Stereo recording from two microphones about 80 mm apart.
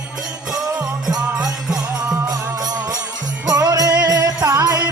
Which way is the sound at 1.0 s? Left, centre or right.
Centre.